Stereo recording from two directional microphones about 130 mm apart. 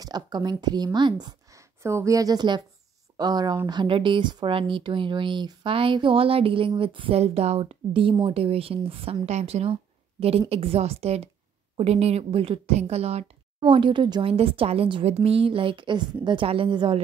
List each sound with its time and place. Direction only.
0.0 s a woman's voice: 30° right (ahead or behind)
14.3 s speech: 45° right (ahead or behind)